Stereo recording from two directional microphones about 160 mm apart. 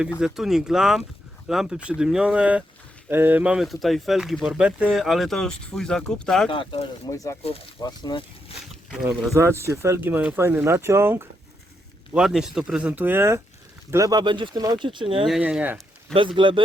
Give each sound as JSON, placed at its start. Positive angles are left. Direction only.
{"t": 0.3, "sound": "speech", "side_deg": 0}
{"t": 6.5, "sound": "speech", "side_deg": 35}
{"t": 7.1, "sound": "speech", "side_deg": 20}
{"t": 8.5, "sound": "speech", "side_deg": 40}
{"t": 8.9, "sound": "speech", "side_deg": -5}
{"t": 9.3, "sound": "speech", "side_deg": -15}
{"t": 12.1, "sound": "speech", "side_deg": -5}
{"t": 15.3, "sound": "speech", "side_deg": -5}
{"t": 16.1, "sound": "speech", "side_deg": -30}